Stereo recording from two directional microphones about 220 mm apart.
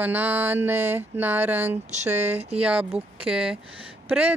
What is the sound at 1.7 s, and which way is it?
Speech, 30° right (ahead or behind).